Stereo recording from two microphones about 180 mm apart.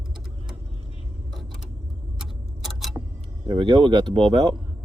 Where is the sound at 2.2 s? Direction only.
Centre (ahead or behind).